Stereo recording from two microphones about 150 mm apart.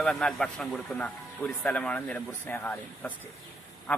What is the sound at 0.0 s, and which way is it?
Speech, 5° left (ahead or behind).